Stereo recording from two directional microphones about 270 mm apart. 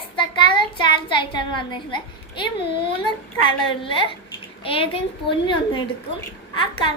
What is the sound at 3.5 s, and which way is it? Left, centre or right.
A child's voice, centre.